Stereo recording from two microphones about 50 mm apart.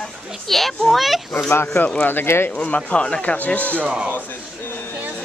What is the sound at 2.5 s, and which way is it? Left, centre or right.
Speech, left.